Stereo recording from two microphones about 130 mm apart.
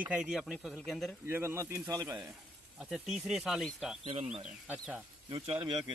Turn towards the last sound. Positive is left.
turn(degrees=-35)  # may be behind; listen again after turning